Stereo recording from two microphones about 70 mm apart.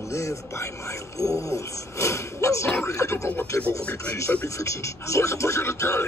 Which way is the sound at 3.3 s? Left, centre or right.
Left.